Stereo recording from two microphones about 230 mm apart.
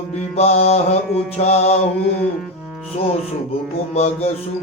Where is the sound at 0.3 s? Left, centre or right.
Left.